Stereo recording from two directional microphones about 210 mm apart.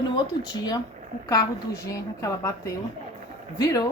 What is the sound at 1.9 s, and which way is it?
Speech, 15° left (ahead or behind).